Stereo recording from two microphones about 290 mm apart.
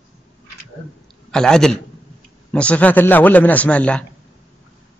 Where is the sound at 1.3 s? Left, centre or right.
Centre.